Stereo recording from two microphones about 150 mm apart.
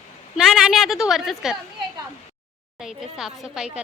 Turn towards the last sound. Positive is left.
turn(degrees=-5)  # may be behind; listen again after turning